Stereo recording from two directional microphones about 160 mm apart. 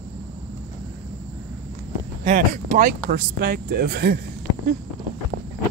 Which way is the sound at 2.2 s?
50° right (ahead or behind).